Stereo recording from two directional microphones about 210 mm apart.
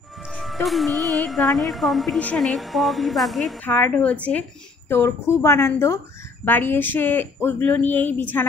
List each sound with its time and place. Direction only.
0.3 s music: centre (ahead or behind)
1.0 s a woman's voice: centre (ahead or behind)